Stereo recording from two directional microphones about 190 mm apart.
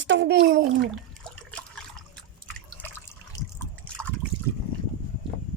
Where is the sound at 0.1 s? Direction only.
65° right (ahead or behind).